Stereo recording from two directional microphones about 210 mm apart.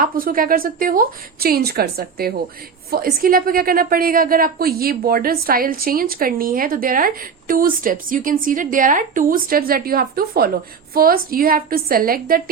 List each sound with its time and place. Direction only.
0.0 s a woman's voice: 40° right (ahead or behind)